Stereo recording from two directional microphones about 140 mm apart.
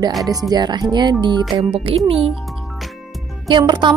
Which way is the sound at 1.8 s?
40° right (ahead or behind).